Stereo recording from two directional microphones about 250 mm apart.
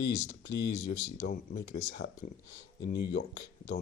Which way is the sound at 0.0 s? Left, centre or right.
Left.